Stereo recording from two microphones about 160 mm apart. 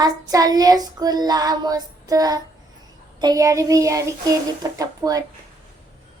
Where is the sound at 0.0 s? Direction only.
20° right (ahead or behind).